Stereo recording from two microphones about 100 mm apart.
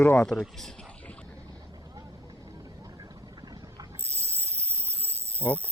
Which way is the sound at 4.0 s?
25° right (ahead or behind).